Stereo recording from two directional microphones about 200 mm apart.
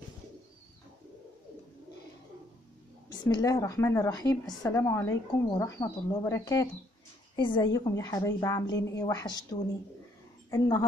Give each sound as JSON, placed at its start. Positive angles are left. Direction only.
{"t": 3.1, "sound": "a woman's voice", "side_deg": 20}